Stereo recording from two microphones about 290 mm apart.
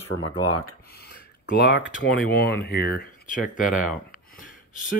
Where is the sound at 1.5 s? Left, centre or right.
Left.